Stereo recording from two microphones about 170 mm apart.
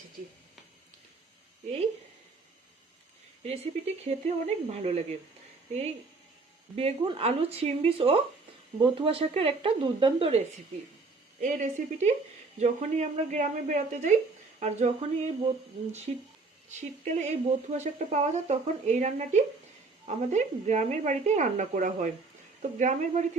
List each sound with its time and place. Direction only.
3.4 s speech: 40° right (ahead or behind)
6.7 s speech: 35° right (ahead or behind)
11.3 s speech: 45° right (ahead or behind)